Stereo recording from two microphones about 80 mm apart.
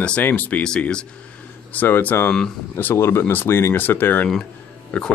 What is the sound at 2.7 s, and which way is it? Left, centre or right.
Speech, left.